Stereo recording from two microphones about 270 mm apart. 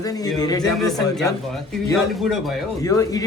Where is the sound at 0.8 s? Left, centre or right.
Centre.